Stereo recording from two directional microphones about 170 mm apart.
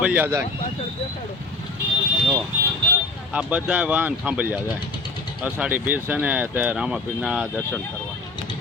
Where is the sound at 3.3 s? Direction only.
5° right (ahead or behind).